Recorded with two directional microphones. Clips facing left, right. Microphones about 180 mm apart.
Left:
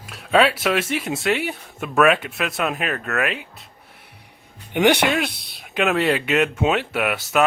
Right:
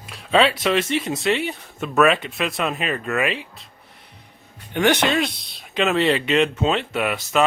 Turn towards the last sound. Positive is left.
turn(degrees=5)  # may be behind; listen again after turning